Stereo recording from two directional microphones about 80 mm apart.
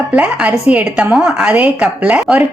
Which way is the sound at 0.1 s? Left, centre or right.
Centre.